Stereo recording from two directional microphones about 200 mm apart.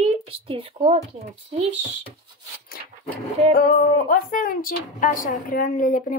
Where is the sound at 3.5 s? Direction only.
50° left (ahead or behind).